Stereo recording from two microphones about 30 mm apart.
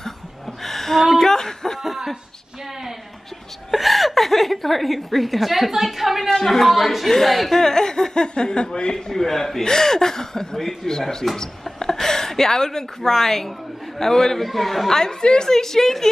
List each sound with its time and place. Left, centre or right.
0.6 s a sound: centre
3.7 s a woman's voice: centre
6.4 s speech: centre
6.7 s speech: centre; by 9.1 s left
9.1 s speech: centre
10.6 s speech: centre
10.9 s a woman's voice: centre
14.5 s speech: centre
15.0 s speech: centre